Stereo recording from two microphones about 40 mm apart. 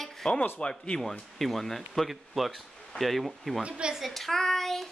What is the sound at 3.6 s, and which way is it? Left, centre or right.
Speech, right.